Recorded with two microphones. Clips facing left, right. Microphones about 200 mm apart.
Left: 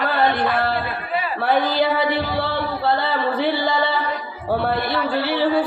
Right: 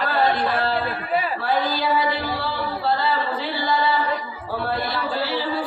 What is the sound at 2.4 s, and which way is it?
Music, 60° left (ahead or behind).